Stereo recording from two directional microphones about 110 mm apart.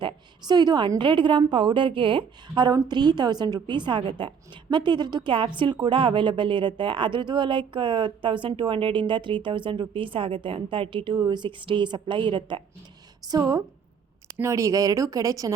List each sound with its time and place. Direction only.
0.0 s a woman's voice: 40° right (ahead or behind)
13.2 s speech: 35° right (ahead or behind)